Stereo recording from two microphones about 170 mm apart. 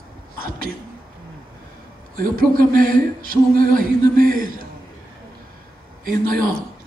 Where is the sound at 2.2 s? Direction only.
55° right (ahead or behind).